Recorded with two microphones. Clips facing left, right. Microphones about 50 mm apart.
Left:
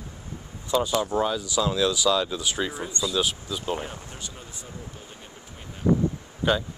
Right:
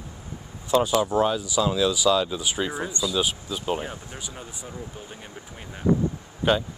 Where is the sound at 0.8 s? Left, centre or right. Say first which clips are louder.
Right 3 dB; centre.